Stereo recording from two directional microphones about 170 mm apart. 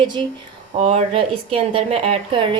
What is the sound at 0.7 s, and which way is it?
A woman's voice, 40° right (ahead or behind).